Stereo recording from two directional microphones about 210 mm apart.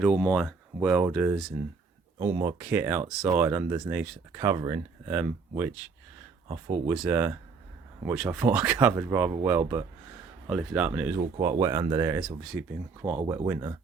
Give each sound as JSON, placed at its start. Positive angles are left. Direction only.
{"t": 0.0, "sound": "speech", "side_deg": 0}
{"t": 6.8, "sound": "speech", "side_deg": -5}